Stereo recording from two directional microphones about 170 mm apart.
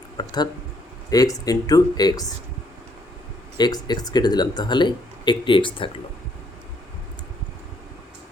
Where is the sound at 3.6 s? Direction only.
25° left (ahead or behind).